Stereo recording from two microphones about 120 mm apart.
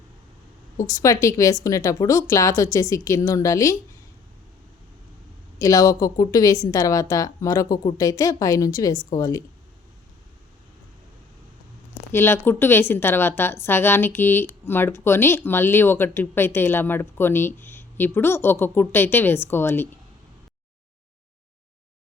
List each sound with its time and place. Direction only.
0.9 s a woman's voice: 25° left (ahead or behind)
5.5 s a woman's voice: 30° left (ahead or behind)
12.1 s a woman's voice: 20° left (ahead or behind)